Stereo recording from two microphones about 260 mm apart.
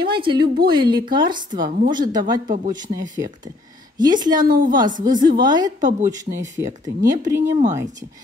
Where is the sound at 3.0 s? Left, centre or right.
Centre.